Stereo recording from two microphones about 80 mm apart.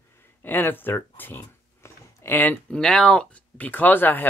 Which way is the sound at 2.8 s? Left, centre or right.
Centre.